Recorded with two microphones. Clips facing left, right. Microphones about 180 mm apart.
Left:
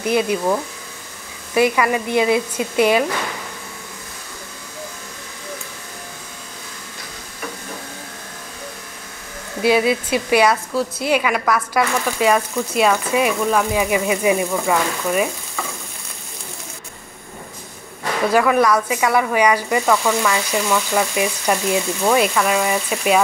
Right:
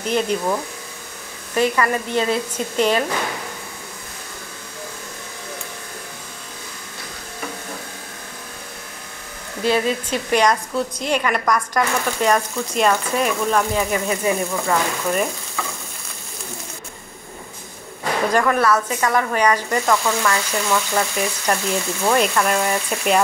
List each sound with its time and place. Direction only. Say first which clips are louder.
0.0 s a woman's voice: left 2 dB; 10° left (ahead or behind)
9.6 s a woman's voice: left 3 dB; 10° left (ahead or behind)
18.3 s a woman's voice: left 3 dB; 5° left (ahead or behind)